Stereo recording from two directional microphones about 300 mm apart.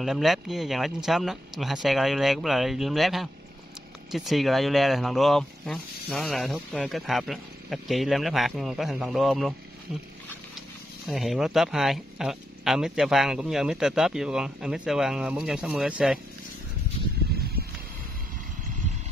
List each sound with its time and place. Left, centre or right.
0.0 s speech: centre
11.1 s speech: centre
17.3 s a sound: right